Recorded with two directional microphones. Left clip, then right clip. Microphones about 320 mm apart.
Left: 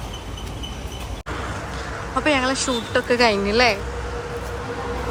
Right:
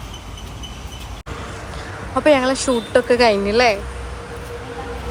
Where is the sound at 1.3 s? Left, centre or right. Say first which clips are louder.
Left 3 dB; left.